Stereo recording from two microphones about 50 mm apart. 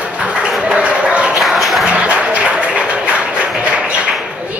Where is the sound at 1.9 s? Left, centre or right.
Right.